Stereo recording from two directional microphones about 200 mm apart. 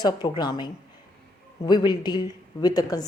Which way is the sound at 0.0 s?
20° left (ahead or behind).